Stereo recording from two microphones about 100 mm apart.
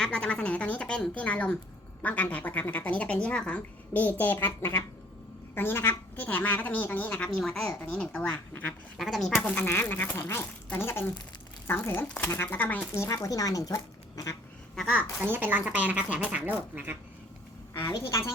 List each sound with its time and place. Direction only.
0.0 s speech: 10° left (ahead or behind)
7.8 s speech: 15° left (ahead or behind)
9.0 s speech: centre (ahead or behind)
9.4 s speech: 25° left (ahead or behind)
12.9 s speech: 30° left (ahead or behind)
15.2 s speech: 20° right (ahead or behind)
17.8 s speech: 35° left (ahead or behind)